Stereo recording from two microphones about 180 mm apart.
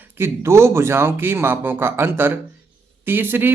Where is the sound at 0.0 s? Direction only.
10° right (ahead or behind).